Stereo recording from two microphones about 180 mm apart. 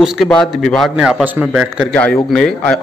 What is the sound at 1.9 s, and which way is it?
Speech, 10° left (ahead or behind).